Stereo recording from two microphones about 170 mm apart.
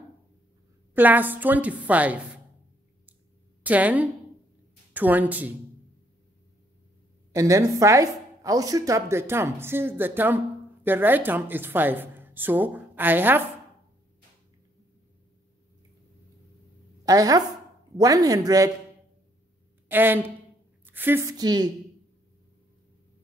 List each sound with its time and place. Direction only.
0.9 s speech: 10° right (ahead or behind)
3.6 s speech: 10° right (ahead or behind)
7.3 s speech: 20° right (ahead or behind)
17.0 s speech: 20° right (ahead or behind)
19.9 s a woman's voice: 10° right (ahead or behind)